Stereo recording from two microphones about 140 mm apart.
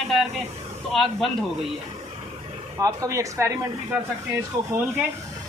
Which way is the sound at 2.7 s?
25° right (ahead or behind).